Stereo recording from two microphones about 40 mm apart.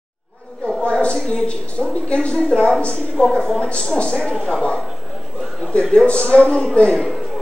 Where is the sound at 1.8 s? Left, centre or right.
Left.